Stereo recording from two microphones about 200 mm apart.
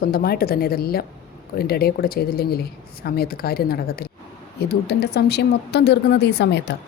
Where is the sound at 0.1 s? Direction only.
50° left (ahead or behind).